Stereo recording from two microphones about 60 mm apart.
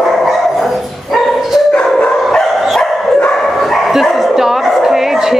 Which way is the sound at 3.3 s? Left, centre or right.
Centre.